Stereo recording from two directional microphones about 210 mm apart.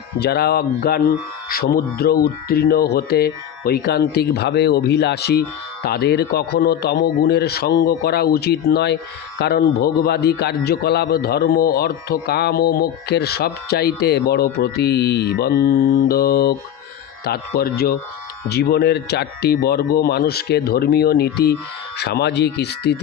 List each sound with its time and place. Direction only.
0.2 s a man's voice: 50° left (ahead or behind)